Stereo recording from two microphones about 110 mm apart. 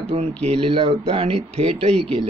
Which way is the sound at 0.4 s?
65° right (ahead or behind).